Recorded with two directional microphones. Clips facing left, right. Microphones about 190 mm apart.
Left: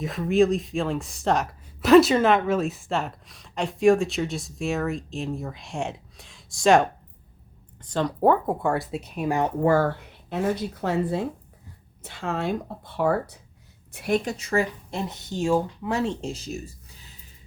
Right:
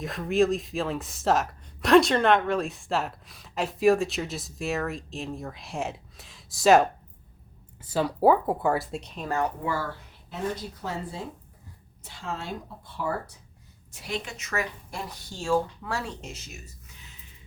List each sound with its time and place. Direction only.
0.0 s speech: centre (ahead or behind)
9.6 s speech: 55° left (ahead or behind)
13.9 s speech: 55° left (ahead or behind)
14.3 s speech: 30° left (ahead or behind)